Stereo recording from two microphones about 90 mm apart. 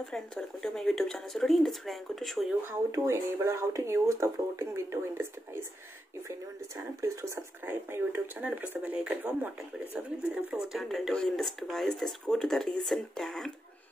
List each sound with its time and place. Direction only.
0.1 s speech: 5° left (ahead or behind)
3.1 s speech: 35° right (ahead or behind)
7.0 s speech: 30° right (ahead or behind)
9.9 s speech: 5° right (ahead or behind)